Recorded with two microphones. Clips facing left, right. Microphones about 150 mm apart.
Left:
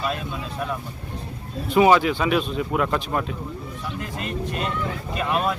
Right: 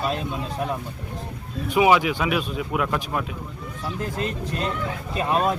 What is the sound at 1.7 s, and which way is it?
Speech, 10° right (ahead or behind).